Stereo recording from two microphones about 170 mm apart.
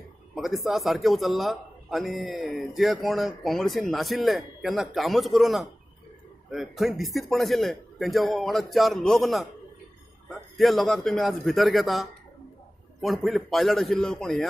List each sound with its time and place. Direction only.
0.3 s a man's voice: centre (ahead or behind)
10.6 s a man's voice: centre (ahead or behind)